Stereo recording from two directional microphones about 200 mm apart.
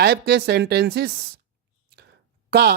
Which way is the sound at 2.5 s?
55° right (ahead or behind).